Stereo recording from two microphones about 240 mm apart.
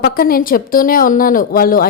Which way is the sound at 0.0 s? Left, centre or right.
Left.